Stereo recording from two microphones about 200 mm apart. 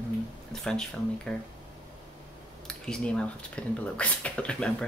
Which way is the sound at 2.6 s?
5° left (ahead or behind).